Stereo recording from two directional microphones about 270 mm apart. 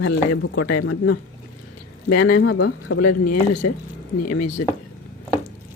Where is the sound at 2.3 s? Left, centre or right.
Left.